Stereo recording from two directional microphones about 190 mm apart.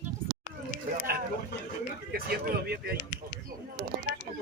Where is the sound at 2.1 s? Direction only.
55° right (ahead or behind).